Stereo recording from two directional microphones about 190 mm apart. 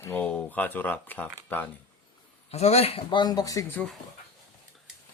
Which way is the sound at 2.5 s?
35° left (ahead or behind).